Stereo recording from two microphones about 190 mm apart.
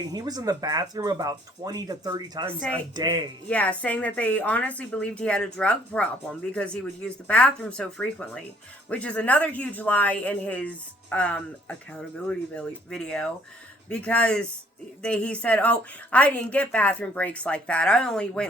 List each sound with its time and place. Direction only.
0.0 s speech: 20° right (ahead or behind)
3.5 s a woman's voice: 5° left (ahead or behind)